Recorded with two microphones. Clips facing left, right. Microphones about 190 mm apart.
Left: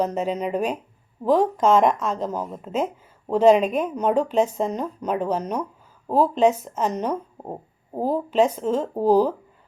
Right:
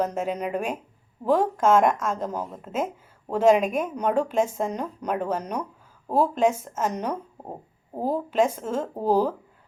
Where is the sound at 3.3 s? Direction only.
10° right (ahead or behind).